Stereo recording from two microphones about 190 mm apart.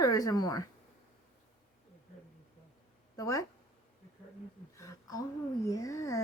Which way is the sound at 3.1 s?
15° left (ahead or behind).